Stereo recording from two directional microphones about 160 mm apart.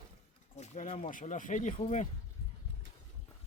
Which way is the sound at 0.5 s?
45° left (ahead or behind).